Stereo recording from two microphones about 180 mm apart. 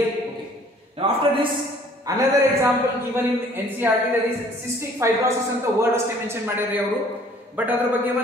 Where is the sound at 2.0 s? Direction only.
20° right (ahead or behind).